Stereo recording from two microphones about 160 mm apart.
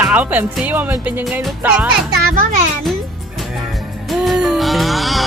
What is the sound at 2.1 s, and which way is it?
Speech, 75° right (ahead or behind).